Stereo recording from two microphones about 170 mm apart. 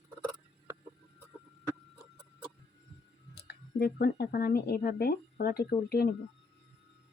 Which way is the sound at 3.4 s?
70° left (ahead or behind).